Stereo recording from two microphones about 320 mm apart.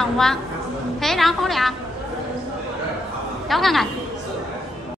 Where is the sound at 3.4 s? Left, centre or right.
Centre.